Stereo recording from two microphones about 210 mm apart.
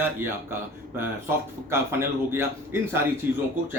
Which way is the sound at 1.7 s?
10° right (ahead or behind).